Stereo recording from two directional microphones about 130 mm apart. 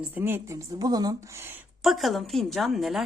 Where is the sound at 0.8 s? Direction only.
30° right (ahead or behind).